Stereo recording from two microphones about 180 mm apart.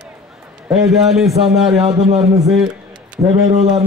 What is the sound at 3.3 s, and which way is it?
Speech, 35° right (ahead or behind).